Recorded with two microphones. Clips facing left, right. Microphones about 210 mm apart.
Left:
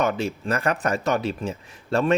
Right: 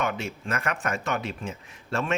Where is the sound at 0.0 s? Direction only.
35° left (ahead or behind).